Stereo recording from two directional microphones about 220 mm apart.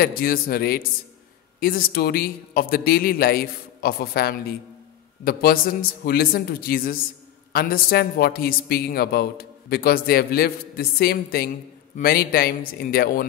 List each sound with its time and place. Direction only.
0.0 s speech: 40° left (ahead or behind)